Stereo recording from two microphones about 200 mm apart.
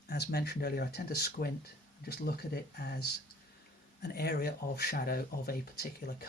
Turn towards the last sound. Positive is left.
turn(degrees=50)  # may be behind; listen again after turning